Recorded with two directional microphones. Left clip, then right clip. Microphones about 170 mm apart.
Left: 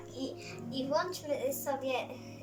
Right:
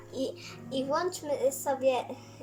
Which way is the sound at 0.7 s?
45° right (ahead or behind).